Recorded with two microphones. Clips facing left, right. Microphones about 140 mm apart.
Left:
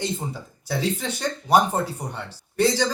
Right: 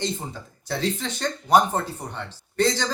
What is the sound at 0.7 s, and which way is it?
Speech, 10° left (ahead or behind).